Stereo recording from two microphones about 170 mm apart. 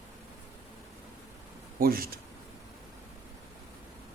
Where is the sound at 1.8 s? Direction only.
60° right (ahead or behind).